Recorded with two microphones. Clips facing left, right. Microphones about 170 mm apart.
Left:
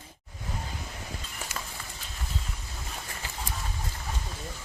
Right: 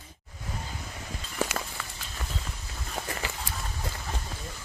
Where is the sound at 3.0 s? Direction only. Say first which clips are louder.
Right 12 dB; 80° right.